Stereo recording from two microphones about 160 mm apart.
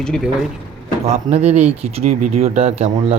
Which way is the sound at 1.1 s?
45° right (ahead or behind).